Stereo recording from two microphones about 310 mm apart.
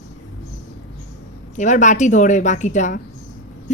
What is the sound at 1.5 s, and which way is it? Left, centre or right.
A woman's voice, left.